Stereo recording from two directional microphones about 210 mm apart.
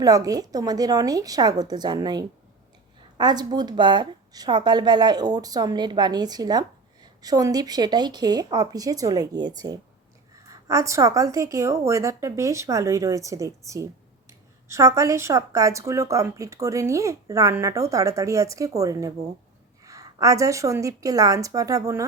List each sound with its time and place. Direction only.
0.0 s a woman's voice: 15° right (ahead or behind)
10.5 s speech: 15° right (ahead or behind)